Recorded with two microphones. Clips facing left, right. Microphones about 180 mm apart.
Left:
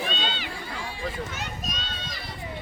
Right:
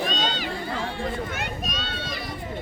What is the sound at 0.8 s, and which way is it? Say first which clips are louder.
Run: right 4 dB; 60° right (ahead or behind).